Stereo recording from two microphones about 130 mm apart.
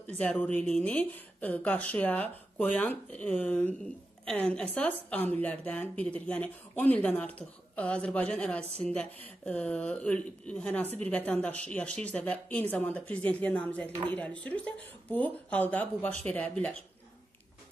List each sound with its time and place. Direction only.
0.2 s speech: 10° left (ahead or behind)